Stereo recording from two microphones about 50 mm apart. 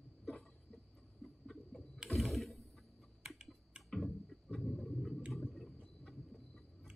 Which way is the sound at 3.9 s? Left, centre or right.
Centre.